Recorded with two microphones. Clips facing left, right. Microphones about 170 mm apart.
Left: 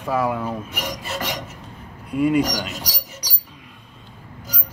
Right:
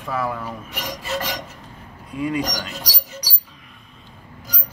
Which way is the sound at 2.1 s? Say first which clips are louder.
Left 6 dB; 65° left (ahead or behind).